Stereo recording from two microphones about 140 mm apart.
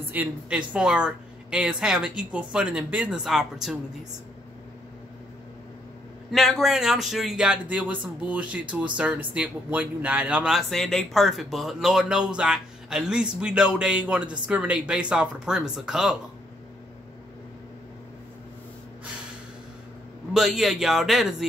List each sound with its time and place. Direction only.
0.1 s speech: 10° right (ahead or behind)
6.3 s speech: centre (ahead or behind)
20.3 s speech: centre (ahead or behind)